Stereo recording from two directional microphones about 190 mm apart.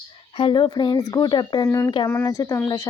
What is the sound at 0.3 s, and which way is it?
Speech, 25° left (ahead or behind).